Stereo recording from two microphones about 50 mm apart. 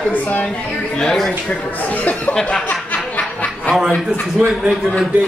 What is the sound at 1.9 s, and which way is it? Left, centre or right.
Speech, left.